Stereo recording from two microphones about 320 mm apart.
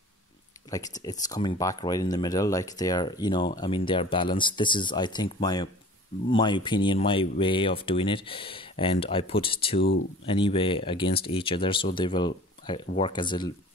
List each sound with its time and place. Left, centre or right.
0.7 s speech: centre
9.8 s speech: left
10.2 s speech: centre